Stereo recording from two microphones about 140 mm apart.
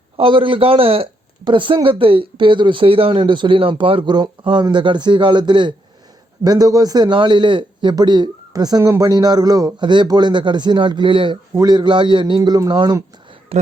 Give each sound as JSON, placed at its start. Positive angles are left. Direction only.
{"t": 0.2, "sound": "a man's voice", "side_deg": -40}
{"t": 13.5, "sound": "speech", "side_deg": -45}